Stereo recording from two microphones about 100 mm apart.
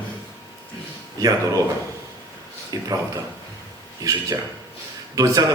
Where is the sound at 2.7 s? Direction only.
35° right (ahead or behind).